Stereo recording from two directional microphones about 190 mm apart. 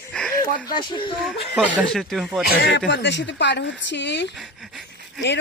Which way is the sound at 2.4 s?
55° left (ahead or behind).